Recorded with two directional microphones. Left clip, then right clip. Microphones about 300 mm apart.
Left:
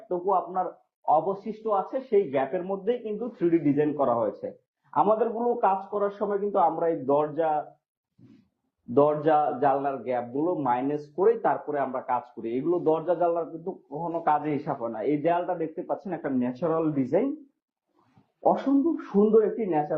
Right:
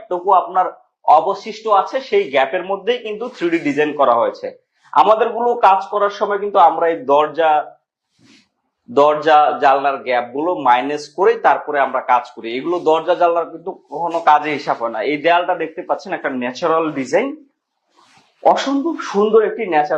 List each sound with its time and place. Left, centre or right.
0.3 s a man's voice: centre
1.0 s speech: right
1.3 s a man's voice: centre
9.0 s a man's voice: centre
13.7 s a man's voice: centre
18.6 s a man's voice: centre